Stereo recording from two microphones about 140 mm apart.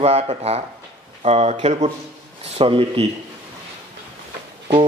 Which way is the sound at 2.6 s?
40° right (ahead or behind).